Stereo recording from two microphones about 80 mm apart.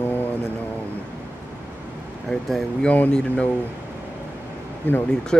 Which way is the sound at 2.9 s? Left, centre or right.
Centre.